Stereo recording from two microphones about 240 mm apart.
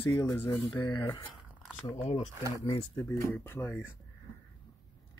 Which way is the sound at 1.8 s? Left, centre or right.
Left.